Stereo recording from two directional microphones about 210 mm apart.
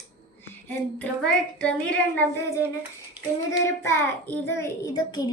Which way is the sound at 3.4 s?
10° left (ahead or behind).